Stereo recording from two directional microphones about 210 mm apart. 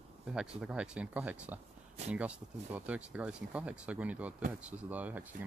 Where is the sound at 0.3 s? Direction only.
5° right (ahead or behind).